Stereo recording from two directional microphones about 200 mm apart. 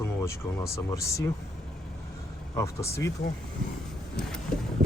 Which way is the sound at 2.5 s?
15° left (ahead or behind).